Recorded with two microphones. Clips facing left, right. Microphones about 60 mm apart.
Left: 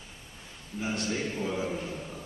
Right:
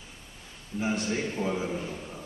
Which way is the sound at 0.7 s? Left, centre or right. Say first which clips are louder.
Right 3 dB; right.